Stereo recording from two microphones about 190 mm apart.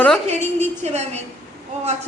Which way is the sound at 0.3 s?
35° right (ahead or behind).